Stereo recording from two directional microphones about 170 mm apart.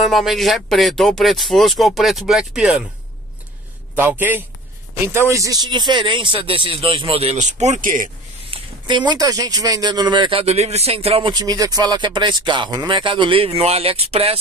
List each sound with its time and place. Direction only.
0.0 s speech: centre (ahead or behind)
3.9 s a man's voice: 10° right (ahead or behind); by 8.1 s 50° right (ahead or behind)
8.5 s a sound: 30° right (ahead or behind)
9.2 s speech: 20° right (ahead or behind)